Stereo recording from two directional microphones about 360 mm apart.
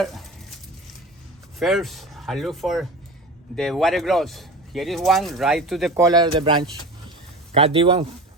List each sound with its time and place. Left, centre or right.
1.5 s speech: centre